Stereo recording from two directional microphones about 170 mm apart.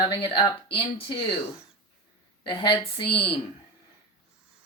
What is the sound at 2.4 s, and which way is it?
Speech, 30° left (ahead or behind).